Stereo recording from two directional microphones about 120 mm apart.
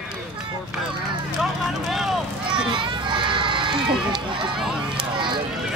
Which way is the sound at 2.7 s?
45° right (ahead or behind).